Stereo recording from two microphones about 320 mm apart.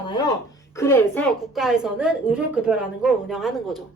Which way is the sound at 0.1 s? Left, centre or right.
Centre.